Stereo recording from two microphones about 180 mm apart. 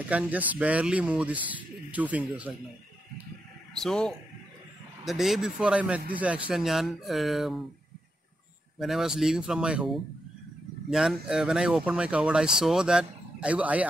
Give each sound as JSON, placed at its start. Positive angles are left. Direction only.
{"t": 0.1, "sound": "speech", "side_deg": -10}
{"t": 3.7, "sound": "speech", "side_deg": 0}
{"t": 8.7, "sound": "speech", "side_deg": 0}